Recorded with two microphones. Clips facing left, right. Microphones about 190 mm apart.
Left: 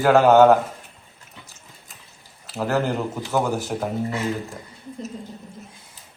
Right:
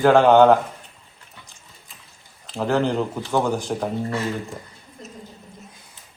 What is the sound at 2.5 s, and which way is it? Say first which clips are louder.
A man's voice: right 2 dB; 5° left (ahead or behind).